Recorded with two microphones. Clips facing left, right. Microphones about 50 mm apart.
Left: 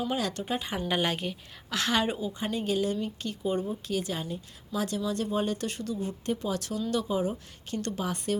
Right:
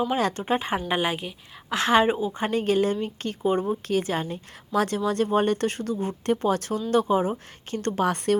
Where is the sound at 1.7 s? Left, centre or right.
Right.